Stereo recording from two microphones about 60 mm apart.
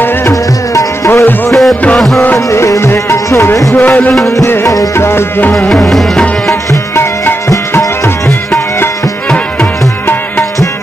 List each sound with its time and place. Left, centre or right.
0.3 s music: left
1.5 s music: centre
2.3 s music: left
3.7 s music: left
4.9 s music: left
5.7 s tabla: centre
8.3 s music: left